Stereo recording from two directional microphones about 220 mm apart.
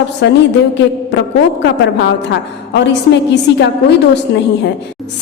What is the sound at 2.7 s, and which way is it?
A woman's voice, 50° left (ahead or behind).